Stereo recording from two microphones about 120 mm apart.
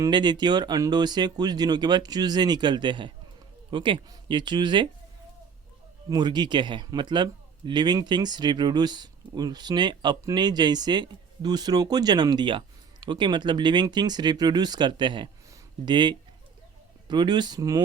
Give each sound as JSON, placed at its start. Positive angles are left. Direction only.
{"t": 0.1, "sound": "speech", "side_deg": -40}
{"t": 6.1, "sound": "speech", "side_deg": -35}